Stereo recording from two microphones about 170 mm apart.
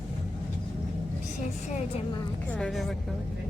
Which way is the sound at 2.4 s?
5° left (ahead or behind).